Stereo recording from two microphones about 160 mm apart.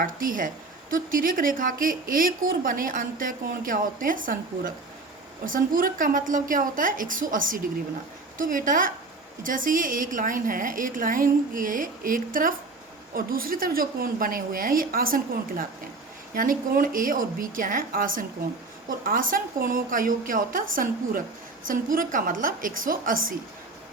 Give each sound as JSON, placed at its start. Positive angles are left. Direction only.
{"t": 0.0, "sound": "a woman's voice", "side_deg": -60}